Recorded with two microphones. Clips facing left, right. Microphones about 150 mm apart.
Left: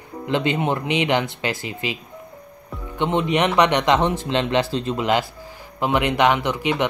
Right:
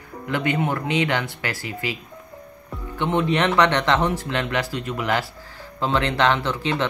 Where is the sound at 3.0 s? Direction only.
20° left (ahead or behind).